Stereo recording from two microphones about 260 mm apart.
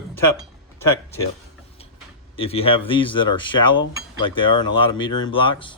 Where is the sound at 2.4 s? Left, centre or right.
Left.